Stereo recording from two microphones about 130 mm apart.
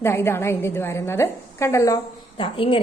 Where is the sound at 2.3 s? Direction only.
45° left (ahead or behind).